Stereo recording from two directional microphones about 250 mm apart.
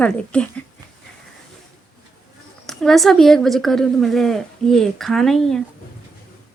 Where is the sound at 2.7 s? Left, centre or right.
Centre.